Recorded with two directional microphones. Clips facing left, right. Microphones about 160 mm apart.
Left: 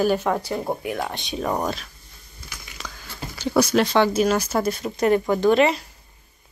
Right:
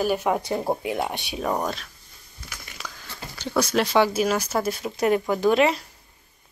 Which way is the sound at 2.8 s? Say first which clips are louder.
Left 1 dB; 5° right (ahead or behind).